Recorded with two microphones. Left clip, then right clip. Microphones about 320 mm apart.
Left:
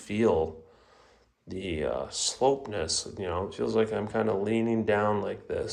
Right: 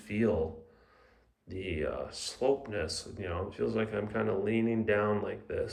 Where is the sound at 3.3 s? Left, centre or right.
Centre.